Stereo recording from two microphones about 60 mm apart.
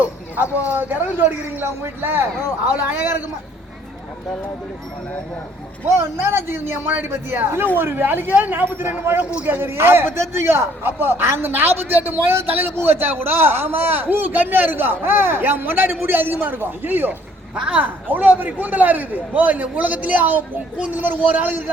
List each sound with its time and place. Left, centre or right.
0.7 s a man's voice: right
6.0 s a man's voice: right